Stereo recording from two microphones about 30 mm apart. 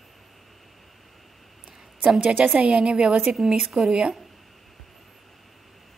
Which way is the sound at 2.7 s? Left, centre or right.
Right.